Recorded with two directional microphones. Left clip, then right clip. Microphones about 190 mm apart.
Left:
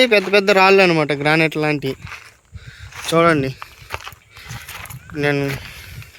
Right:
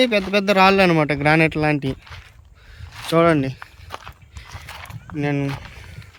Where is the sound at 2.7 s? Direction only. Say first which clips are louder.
Left 2 dB; 10° right (ahead or behind).